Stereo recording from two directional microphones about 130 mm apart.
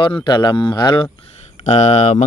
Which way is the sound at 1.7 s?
55° left (ahead or behind).